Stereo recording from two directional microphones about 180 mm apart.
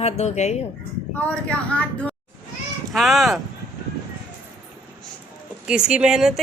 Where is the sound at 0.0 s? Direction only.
40° left (ahead or behind).